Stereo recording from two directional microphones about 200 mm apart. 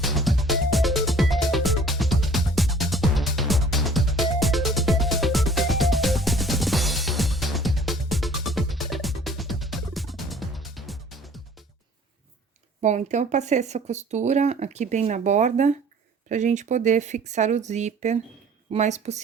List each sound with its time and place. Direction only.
0.0 s music: centre (ahead or behind)
12.8 s speech: 35° right (ahead or behind)